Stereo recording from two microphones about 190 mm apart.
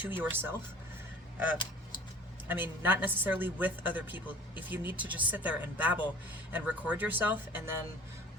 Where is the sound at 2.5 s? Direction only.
10° right (ahead or behind).